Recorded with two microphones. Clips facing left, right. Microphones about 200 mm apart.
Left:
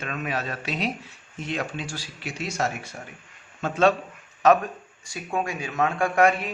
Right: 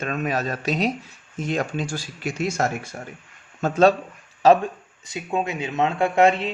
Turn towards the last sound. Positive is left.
turn(degrees=-25)  # may be behind; listen again after turning